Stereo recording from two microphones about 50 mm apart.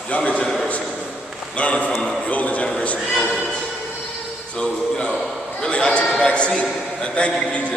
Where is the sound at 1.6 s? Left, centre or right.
Left.